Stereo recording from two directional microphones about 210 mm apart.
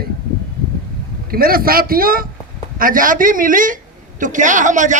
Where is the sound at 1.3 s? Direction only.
45° right (ahead or behind).